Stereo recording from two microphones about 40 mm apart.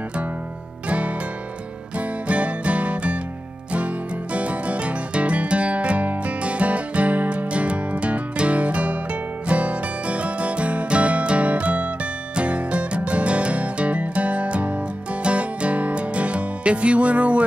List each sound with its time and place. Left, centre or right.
0.8 s music: right